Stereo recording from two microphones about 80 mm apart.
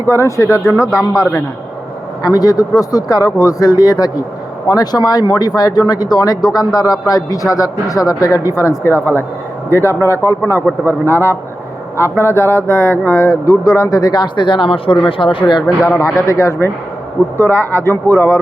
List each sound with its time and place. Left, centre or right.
0.1 s speech: left
13.4 s speech: left
16.0 s speech: left